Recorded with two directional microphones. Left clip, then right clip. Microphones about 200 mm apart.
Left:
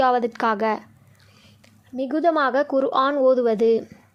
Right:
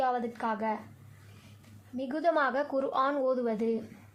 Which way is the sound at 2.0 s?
35° left (ahead or behind).